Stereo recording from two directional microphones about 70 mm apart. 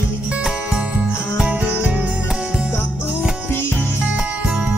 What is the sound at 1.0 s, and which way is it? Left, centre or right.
Music, centre.